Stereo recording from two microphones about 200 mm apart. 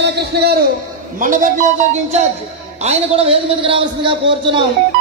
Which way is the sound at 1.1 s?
40° right (ahead or behind).